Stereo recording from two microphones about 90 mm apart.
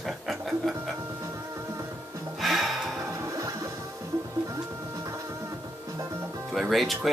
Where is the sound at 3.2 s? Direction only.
40° right (ahead or behind).